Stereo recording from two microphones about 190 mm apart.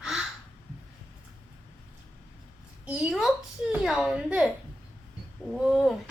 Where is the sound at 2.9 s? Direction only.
5° right (ahead or behind).